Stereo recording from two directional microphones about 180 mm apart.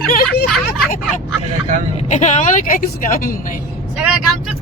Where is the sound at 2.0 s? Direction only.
40° left (ahead or behind).